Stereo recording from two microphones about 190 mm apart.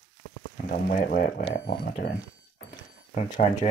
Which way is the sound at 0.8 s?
45° left (ahead or behind).